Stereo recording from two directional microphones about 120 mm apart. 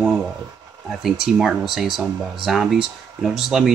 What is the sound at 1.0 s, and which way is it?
Speech, 5° right (ahead or behind).